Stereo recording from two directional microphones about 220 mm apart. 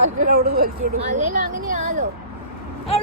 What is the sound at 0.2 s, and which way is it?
Speech, 45° right (ahead or behind).